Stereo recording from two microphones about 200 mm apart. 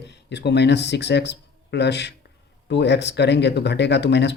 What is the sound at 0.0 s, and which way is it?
Speech, 60° left (ahead or behind).